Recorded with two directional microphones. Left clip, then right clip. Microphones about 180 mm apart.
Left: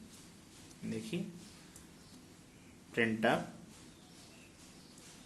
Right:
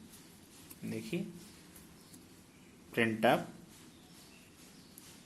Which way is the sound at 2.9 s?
25° right (ahead or behind).